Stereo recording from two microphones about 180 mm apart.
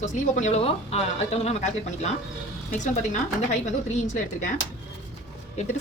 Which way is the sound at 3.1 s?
40° left (ahead or behind).